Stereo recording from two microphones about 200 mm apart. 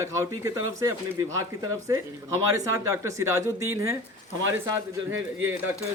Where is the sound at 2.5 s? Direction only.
15° right (ahead or behind).